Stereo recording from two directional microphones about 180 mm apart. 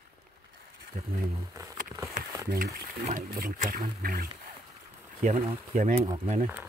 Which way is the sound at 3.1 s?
50° right (ahead or behind).